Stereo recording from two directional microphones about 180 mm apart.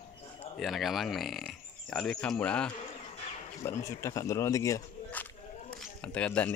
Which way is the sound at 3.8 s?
15° left (ahead or behind).